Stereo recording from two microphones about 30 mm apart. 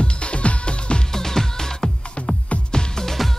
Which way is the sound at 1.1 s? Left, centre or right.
Centre.